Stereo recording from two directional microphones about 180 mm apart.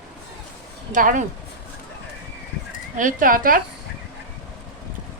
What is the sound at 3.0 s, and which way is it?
Speech, 50° right (ahead or behind).